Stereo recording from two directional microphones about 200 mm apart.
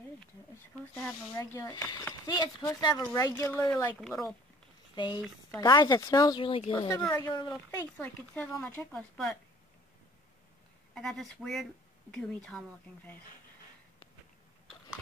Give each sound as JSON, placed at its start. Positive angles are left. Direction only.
{"t": 0.9, "sound": "speech", "side_deg": 10}
{"t": 4.9, "sound": "speech", "side_deg": 25}
{"t": 11.0, "sound": "speech", "side_deg": 0}